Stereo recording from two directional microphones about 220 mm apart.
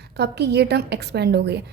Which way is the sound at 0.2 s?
50° right (ahead or behind).